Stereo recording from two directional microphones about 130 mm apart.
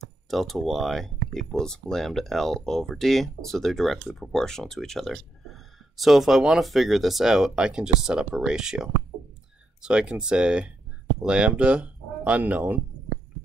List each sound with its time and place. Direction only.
0.3 s speech: centre (ahead or behind)